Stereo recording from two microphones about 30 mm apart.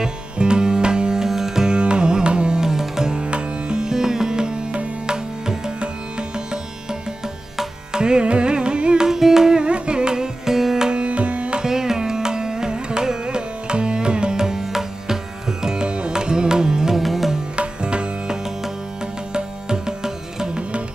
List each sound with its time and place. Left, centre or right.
0.0 s music: right
1.2 s music: centre
1.7 s carnatic music: right
2.6 s music: centre
3.2 s music: right
9.0 s music: centre
9.6 s music: right; by 10.9 s centre
10.9 s music: right
11.6 s carnatic music: centre
14.4 s music: centre
15.6 s music: right
16.9 s music: centre
17.6 s music: right
19.3 s music: right